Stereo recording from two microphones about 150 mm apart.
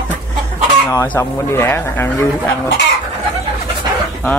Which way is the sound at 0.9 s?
20° left (ahead or behind).